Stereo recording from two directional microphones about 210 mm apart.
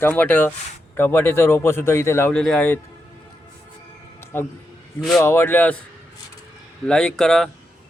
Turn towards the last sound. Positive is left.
turn(degrees=5)  # may be behind; listen again after turning